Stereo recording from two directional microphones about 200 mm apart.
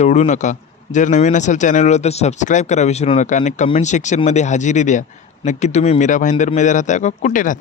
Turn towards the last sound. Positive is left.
turn(degrees=40)  # may be behind; listen again after turning